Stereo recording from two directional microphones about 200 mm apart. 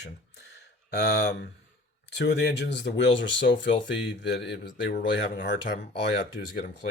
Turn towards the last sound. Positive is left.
turn(degrees=60)  # may be behind; listen again after turning